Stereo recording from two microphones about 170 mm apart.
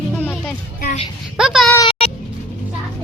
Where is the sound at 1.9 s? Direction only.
35° left (ahead or behind).